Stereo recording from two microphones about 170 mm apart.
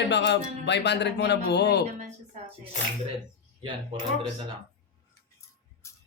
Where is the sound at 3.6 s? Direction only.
30° right (ahead or behind).